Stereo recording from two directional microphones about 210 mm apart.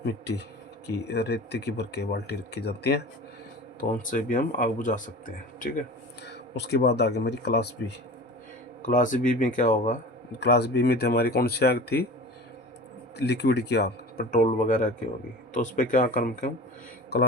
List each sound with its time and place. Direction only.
0.0 s speech: 55° left (ahead or behind)
3.8 s speech: 40° left (ahead or behind)
6.2 s speech: 55° left (ahead or behind)
8.8 s speech: 40° left (ahead or behind)
10.4 s speech: 50° left (ahead or behind)
13.1 s speech: 55° left (ahead or behind)
14.3 s speech: 40° left (ahead or behind)